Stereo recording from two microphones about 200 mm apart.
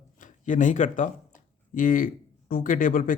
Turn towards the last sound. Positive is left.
turn(degrees=45)  # may be behind; listen again after turning